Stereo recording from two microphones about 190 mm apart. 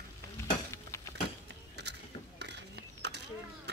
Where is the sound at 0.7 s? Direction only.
15° left (ahead or behind).